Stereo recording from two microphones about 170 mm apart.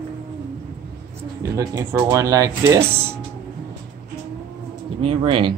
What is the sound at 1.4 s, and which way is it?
Speech, 20° right (ahead or behind).